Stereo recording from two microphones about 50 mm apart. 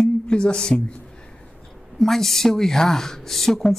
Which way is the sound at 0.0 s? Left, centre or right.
Centre.